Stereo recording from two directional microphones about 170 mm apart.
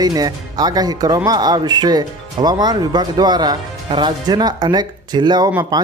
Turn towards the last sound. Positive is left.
turn(degrees=-25)  # may be behind; listen again after turning